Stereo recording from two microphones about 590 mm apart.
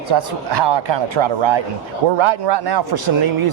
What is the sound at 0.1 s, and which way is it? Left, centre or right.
Speech, right.